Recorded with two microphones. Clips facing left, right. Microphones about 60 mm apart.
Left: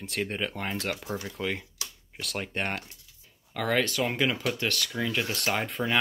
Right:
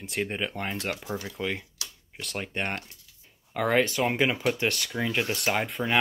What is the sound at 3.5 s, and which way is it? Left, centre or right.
Speech, centre.